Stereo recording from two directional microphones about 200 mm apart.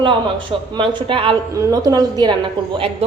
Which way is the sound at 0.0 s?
25° right (ahead or behind).